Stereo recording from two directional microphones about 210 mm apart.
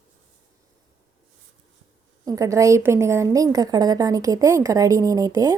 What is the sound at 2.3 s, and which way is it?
A woman's voice, 15° right (ahead or behind).